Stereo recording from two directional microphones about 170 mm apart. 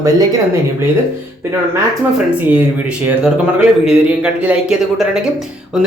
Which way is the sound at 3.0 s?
10° right (ahead or behind).